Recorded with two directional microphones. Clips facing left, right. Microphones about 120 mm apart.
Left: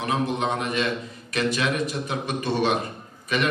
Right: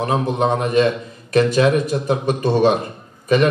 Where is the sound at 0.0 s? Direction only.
40° right (ahead or behind).